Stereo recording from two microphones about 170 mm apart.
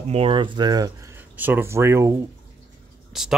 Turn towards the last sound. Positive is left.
turn(degrees=-5)  # may be behind; listen again after turning